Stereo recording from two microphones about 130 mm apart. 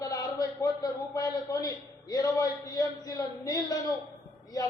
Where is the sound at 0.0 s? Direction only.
30° left (ahead or behind).